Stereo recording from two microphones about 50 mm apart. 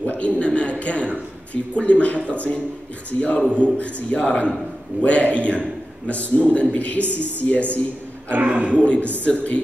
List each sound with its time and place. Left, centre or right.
0.0 s a man's voice: left
8.3 s speech: right
8.7 s a man's voice: left